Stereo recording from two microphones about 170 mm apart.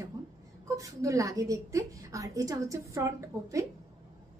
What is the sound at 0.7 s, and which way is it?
A woman's voice, 20° right (ahead or behind).